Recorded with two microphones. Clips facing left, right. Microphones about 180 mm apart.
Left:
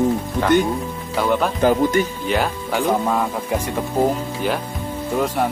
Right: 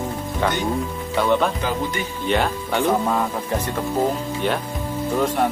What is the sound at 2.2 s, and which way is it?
Speech, 5° left (ahead or behind).